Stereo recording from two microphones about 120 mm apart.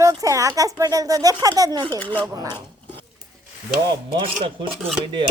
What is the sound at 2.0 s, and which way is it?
Speech, 15° left (ahead or behind).